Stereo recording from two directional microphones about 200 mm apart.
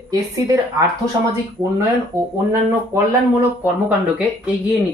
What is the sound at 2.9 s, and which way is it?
Speech, 15° right (ahead or behind).